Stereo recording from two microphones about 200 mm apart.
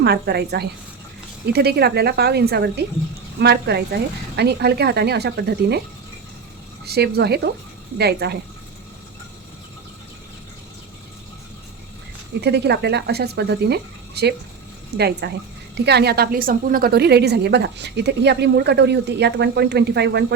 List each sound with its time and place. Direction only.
0.0 s a woman's voice: 55° right (ahead or behind)
6.8 s a woman's voice: 55° right (ahead or behind)
12.4 s a woman's voice: 55° right (ahead or behind)